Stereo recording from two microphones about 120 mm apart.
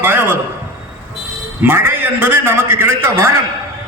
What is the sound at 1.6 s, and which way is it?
A man's voice, 15° right (ahead or behind).